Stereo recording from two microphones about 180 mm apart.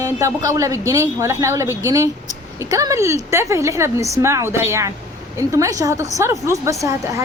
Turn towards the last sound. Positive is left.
turn(degrees=-15)  # may be behind; listen again after turning